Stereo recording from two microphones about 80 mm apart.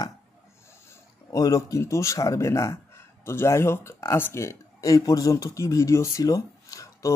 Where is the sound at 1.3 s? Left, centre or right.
Left.